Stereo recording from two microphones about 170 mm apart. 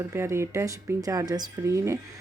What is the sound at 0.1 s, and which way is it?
Speech, 15° right (ahead or behind).